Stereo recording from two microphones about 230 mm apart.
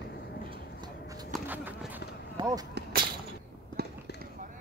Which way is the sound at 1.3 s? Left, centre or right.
Centre.